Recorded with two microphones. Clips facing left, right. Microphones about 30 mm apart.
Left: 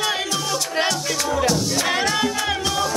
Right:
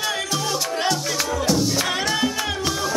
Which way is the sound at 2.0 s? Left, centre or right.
Centre.